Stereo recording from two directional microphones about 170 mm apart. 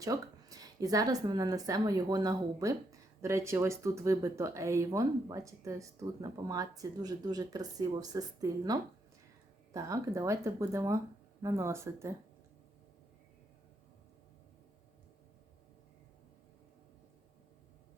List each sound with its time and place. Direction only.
0.0 s speech: 20° right (ahead or behind)